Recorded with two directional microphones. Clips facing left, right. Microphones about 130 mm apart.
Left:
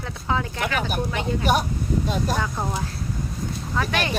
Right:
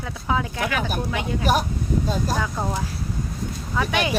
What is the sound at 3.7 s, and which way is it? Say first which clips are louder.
Speech: right 2 dB; 10° right (ahead or behind).